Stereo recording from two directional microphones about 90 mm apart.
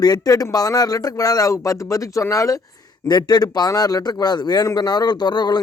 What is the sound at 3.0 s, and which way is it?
A man's voice, 50° left (ahead or behind).